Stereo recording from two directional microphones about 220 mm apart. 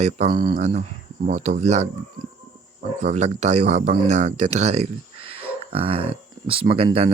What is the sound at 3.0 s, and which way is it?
Speech, 30° right (ahead or behind).